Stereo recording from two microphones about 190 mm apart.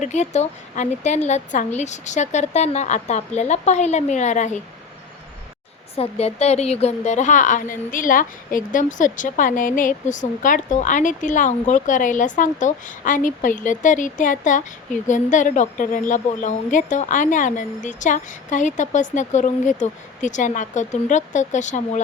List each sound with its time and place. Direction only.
0.0 s a woman's voice: 35° left (ahead or behind)
6.0 s a woman's voice: 35° left (ahead or behind)